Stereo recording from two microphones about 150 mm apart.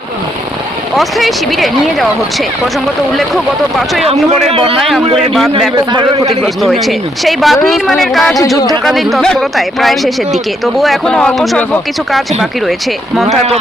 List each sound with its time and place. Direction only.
0.9 s speech: centre (ahead or behind)
3.2 s speech: centre (ahead or behind)
4.4 s a man's voice: 40° right (ahead or behind)
4.8 s speech: centre (ahead or behind)
5.7 s a man's voice: 30° right (ahead or behind)
6.4 s speech: centre (ahead or behind)